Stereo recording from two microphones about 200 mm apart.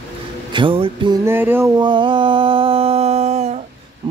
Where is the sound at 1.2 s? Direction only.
10° right (ahead or behind); by 3.7 s 35° right (ahead or behind).